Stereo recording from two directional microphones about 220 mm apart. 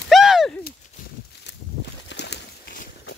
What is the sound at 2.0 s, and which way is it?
Bird, 50° left (ahead or behind).